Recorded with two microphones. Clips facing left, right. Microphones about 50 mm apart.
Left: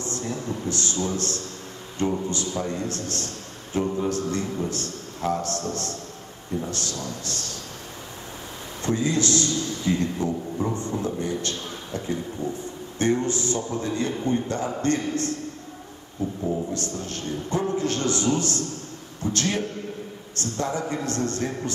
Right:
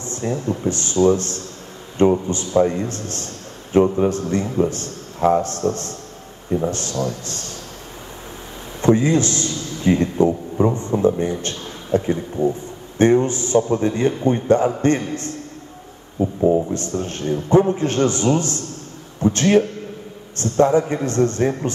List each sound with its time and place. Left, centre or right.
0.2 s a man's voice: right
3.8 s a man's voice: right
4.1 s a man's voice: right
8.8 s a man's voice: right
13.6 s a man's voice: right
13.9 s a man's voice: right
16.2 s speech: right
16.7 s a man's voice: right